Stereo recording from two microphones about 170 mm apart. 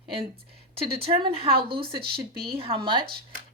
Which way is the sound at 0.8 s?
30° right (ahead or behind).